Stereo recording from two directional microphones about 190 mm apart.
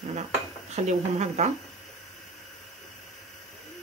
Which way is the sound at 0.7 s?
35° right (ahead or behind).